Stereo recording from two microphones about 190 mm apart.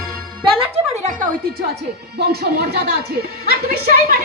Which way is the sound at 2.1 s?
55° right (ahead or behind).